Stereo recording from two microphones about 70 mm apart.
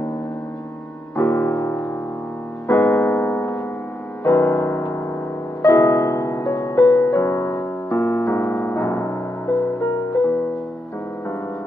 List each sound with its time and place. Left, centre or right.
1.1 s music: left